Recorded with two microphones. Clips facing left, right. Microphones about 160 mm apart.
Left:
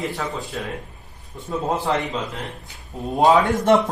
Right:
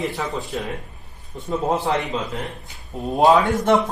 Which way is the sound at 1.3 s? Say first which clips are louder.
Right 2 dB; 20° right (ahead or behind).